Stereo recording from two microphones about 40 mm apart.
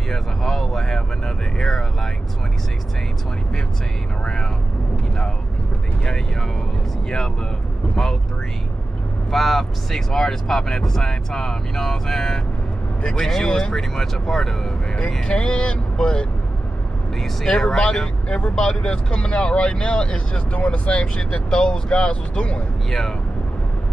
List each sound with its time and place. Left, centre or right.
0.1 s vehicle: centre
6.0 s speech: centre
7.9 s speech: centre
9.3 s speech: centre
15.2 s speech: left
17.5 s speech: centre
22.8 s speech: centre